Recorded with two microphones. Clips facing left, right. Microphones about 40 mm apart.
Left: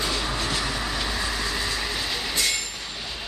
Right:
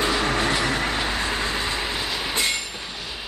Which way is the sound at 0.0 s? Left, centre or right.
Right.